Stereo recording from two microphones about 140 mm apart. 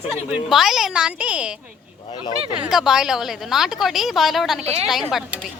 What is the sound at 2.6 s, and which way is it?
A woman's voice, 5° right (ahead or behind).